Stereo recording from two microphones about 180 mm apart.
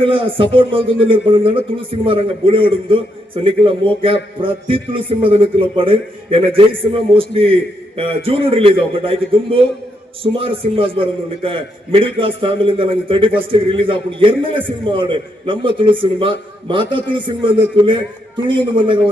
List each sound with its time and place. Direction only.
0.0 s a man's voice: 30° right (ahead or behind)